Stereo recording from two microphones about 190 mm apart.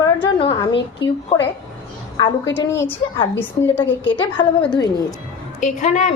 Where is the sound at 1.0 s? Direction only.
65° left (ahead or behind).